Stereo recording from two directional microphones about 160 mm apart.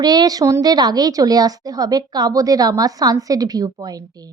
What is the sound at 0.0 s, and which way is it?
A woman's voice, 25° right (ahead or behind).